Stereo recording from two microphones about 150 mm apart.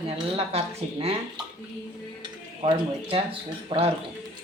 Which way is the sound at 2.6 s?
35° right (ahead or behind).